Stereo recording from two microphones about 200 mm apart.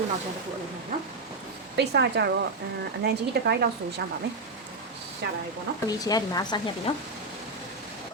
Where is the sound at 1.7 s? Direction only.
55° right (ahead or behind).